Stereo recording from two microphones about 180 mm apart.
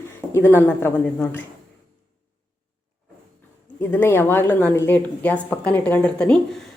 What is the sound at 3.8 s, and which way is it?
A woman's voice, 10° left (ahead or behind).